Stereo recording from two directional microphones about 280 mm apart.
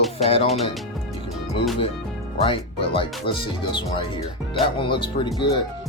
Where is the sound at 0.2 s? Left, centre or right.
Left.